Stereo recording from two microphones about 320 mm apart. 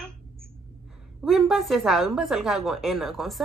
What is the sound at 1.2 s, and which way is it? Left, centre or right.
Speech, centre.